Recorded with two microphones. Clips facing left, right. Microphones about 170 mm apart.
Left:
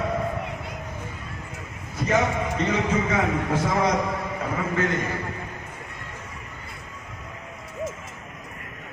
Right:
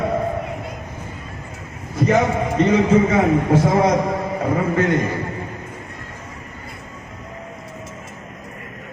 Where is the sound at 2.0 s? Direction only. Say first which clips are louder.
Right 6 dB; 35° right (ahead or behind).